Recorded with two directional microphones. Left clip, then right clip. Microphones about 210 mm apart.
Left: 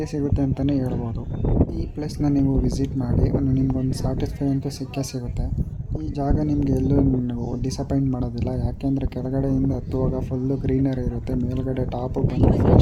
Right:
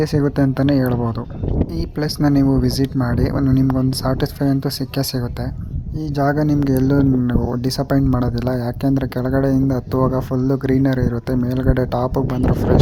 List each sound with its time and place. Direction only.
0.0 s speech: 20° right (ahead or behind)
2.0 s speech: 20° right (ahead or behind)